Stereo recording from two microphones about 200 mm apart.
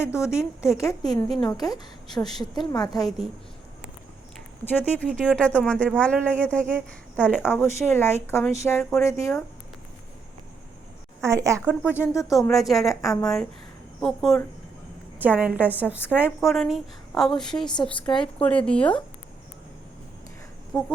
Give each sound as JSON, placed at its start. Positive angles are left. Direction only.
{"t": 0.3, "sound": "a woman's voice", "side_deg": 15}
{"t": 4.8, "sound": "speech", "side_deg": 10}
{"t": 11.2, "sound": "a woman's voice", "side_deg": -15}
{"t": 15.2, "sound": "a woman's voice", "side_deg": -10}
{"t": 20.7, "sound": "speech", "side_deg": 10}